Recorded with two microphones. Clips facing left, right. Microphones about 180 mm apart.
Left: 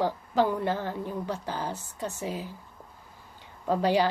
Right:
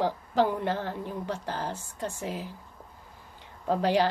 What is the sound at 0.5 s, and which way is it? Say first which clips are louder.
A woman's voice: left 1 dB; 5° left (ahead or behind).